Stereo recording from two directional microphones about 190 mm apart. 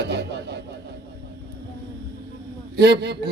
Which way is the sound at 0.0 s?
60° right (ahead or behind).